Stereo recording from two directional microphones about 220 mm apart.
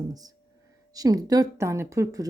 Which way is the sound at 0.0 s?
15° right (ahead or behind).